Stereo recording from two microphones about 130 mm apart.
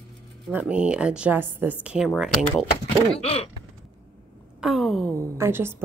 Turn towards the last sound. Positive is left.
turn(degrees=-20)  # may be behind; listen again after turning